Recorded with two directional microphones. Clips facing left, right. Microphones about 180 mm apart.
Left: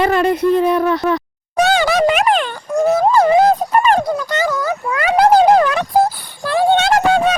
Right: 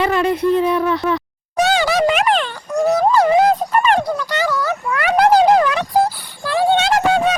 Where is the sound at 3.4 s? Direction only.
40° left (ahead or behind).